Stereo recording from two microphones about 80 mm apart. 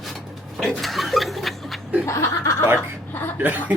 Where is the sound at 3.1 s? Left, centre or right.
Left.